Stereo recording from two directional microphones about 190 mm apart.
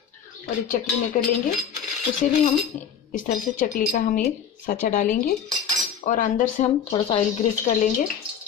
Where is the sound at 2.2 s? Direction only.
40° left (ahead or behind).